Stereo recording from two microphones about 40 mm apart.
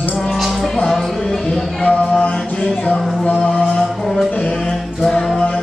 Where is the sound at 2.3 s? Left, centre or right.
Centre.